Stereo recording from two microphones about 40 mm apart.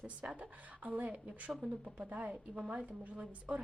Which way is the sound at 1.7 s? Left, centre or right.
Right.